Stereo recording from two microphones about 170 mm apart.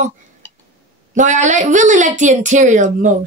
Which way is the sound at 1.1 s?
45° right (ahead or behind).